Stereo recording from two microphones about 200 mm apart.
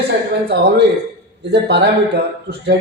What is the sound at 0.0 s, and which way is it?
A man's voice, 55° right (ahead or behind).